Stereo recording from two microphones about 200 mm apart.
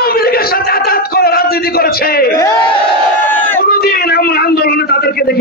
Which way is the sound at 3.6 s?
50° left (ahead or behind).